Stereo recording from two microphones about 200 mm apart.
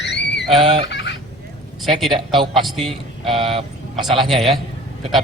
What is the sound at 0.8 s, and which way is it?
Fowl, 60° left (ahead or behind).